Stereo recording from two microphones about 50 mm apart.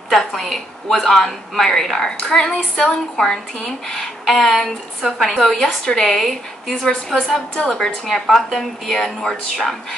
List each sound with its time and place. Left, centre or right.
0.3 s a woman's voice: centre
7.5 s a woman's voice: centre
8.3 s speech: centre